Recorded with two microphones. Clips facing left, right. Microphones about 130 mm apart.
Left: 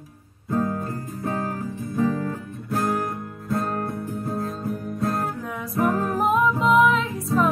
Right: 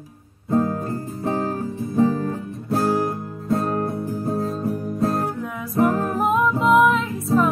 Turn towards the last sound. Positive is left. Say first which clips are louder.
# right 2 dB
turn(degrees=0)  # may be behind; listen again after turning